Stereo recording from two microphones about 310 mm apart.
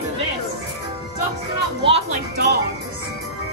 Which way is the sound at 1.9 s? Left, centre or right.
Right.